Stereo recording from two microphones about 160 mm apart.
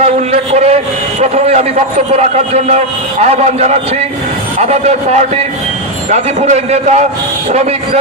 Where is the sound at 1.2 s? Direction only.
45° right (ahead or behind).